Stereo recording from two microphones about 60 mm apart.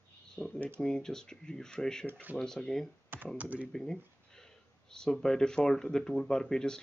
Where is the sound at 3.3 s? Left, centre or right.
Right.